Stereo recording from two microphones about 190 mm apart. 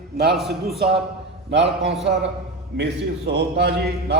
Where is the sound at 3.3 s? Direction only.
60° right (ahead or behind).